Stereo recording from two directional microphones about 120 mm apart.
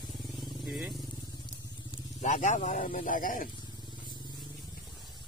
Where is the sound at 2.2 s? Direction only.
85° left.